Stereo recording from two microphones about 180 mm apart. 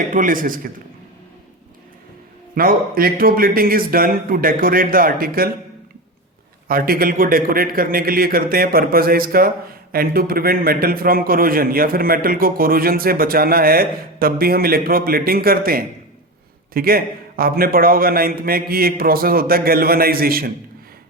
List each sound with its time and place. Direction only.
0.1 s speech: 50° right (ahead or behind)
2.6 s speech: 55° right (ahead or behind)
6.7 s a man's voice: 55° right (ahead or behind)